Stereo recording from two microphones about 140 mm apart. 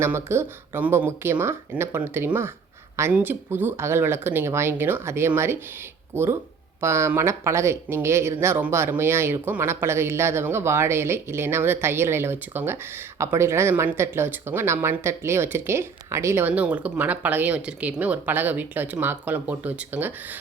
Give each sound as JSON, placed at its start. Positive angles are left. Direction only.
{"t": 0.0, "sound": "speech", "side_deg": -20}